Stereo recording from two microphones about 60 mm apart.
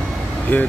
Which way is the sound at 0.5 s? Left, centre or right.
Left.